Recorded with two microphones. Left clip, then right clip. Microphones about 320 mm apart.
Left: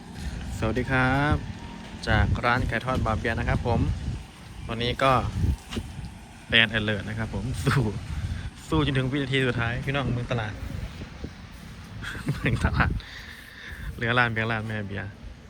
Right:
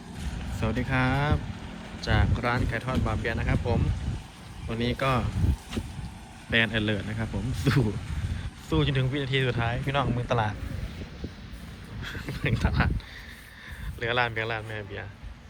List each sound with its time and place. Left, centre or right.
0.2 s speech: centre
6.5 s speech: centre
12.0 s speech: centre
14.0 s speech: centre